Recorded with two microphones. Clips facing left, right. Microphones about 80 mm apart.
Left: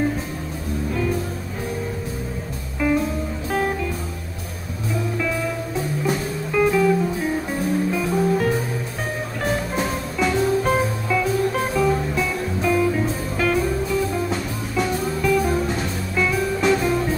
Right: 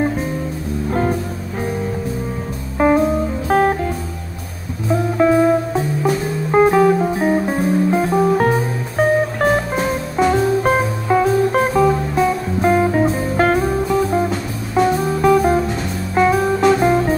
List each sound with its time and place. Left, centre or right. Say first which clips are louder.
2.8 s music: right 7 dB; right
5.1 s music: right 16 dB; right